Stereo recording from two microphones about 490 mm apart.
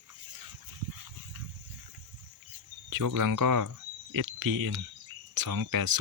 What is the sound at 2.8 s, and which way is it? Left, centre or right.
Speech, right.